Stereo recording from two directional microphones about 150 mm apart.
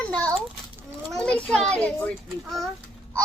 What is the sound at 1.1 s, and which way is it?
A child's voice, 5° left (ahead or behind).